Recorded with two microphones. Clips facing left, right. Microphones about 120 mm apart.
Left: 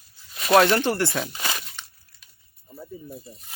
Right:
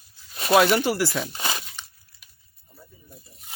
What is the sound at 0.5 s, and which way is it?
Speech, 5° right (ahead or behind).